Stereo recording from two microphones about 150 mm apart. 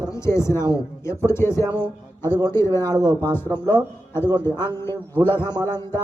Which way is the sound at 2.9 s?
25° right (ahead or behind).